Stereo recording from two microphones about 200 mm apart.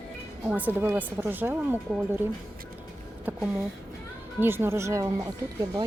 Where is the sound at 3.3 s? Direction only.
15° right (ahead or behind).